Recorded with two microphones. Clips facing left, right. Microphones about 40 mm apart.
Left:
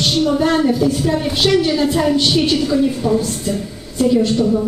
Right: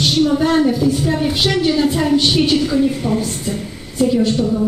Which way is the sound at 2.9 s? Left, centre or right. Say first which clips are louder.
Left 2 dB; right.